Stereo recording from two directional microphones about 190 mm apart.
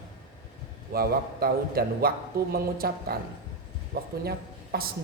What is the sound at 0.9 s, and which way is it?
A man's voice, 50° right (ahead or behind).